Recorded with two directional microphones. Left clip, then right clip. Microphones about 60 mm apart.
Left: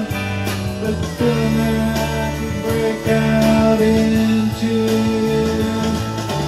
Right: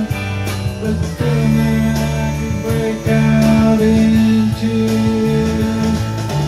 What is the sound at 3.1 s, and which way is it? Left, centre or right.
Music, centre.